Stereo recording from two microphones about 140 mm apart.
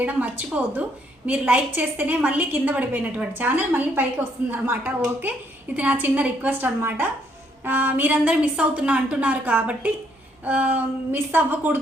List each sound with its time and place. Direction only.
0.0 s a woman's voice: 10° right (ahead or behind)